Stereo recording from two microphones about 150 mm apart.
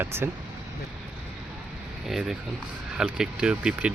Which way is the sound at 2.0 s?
Centre (ahead or behind).